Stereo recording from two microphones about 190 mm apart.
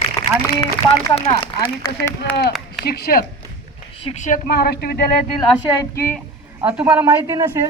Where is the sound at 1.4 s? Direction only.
20° left (ahead or behind).